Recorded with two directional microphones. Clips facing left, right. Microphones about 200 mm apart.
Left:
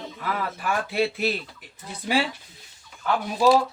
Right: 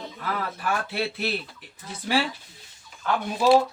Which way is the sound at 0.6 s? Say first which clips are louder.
Left 4 dB; 10° left (ahead or behind).